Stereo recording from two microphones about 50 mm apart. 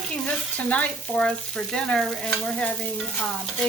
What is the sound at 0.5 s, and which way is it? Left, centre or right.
Frying, left.